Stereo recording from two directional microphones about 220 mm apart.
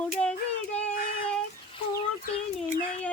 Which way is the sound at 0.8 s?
5° left (ahead or behind).